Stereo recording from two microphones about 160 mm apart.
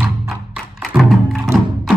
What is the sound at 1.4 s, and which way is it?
Music, centre (ahead or behind).